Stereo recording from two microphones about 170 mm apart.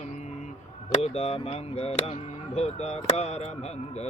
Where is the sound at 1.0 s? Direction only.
35° left (ahead or behind).